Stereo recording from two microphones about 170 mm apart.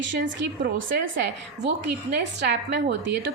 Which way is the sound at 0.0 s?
90° right.